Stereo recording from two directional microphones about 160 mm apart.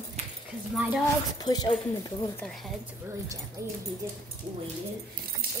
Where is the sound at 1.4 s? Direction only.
25° left (ahead or behind).